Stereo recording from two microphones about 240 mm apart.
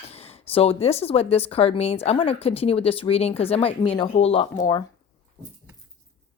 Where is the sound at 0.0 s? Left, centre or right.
Left.